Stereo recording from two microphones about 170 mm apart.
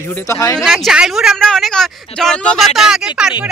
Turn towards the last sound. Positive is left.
turn(degrees=-5)  # may be behind; listen again after turning